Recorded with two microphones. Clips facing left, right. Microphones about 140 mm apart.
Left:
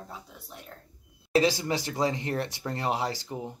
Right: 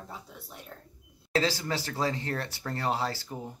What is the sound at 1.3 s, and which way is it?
Speech, 15° left (ahead or behind).